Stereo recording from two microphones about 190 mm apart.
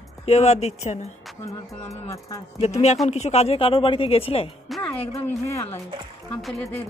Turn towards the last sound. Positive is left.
turn(degrees=0)  # may be behind; listen again after turning